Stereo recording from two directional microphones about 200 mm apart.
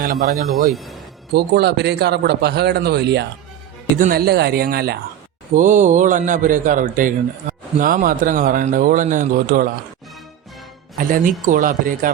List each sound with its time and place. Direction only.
0.0 s speech: 45° right (ahead or behind)
0.7 s speech: centre (ahead or behind)
1.3 s speech: 55° right (ahead or behind)
5.5 s a man's voice: 40° right (ahead or behind)
10.9 s speech: 45° right (ahead or behind)